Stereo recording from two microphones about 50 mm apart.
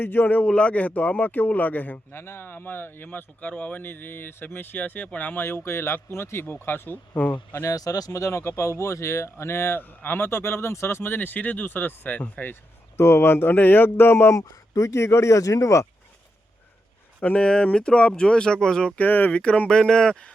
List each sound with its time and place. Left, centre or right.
0.0 s a man's voice: left
0.4 s a man's voice: left
2.1 s speech: left
3.1 s a man's voice: left
3.8 s speech: left
7.6 s speech: left
13.0 s speech: left
17.2 s speech: left
17.4 s speech: left
18.9 s a man's voice: left
19.3 s speech: left
19.7 s speech: centre